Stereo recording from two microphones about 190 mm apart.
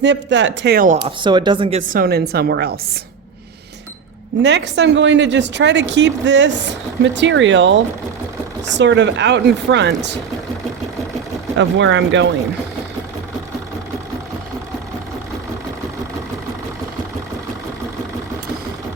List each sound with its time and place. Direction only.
0.0 s speech: 70° right (ahead or behind)
1.2 s speech: 25° right (ahead or behind)
1.9 s a woman's voice: 55° right (ahead or behind)
4.4 s speech: 65° right (ahead or behind)
11.5 s speech: 70° right (ahead or behind)